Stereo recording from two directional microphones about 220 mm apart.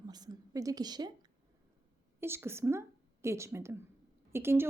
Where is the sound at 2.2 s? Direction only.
10° right (ahead or behind).